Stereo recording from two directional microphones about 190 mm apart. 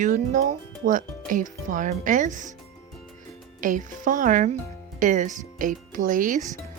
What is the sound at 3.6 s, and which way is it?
Speech, 45° right (ahead or behind).